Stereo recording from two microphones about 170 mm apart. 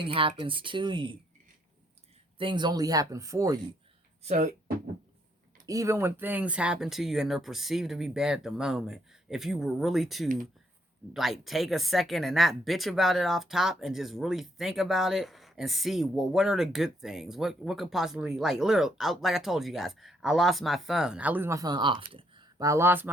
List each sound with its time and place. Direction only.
0.0 s speech: 30° right (ahead or behind)
2.4 s speech: 25° right (ahead or behind)
4.2 s speech: 45° right (ahead or behind)
5.6 s speech: 20° right (ahead or behind)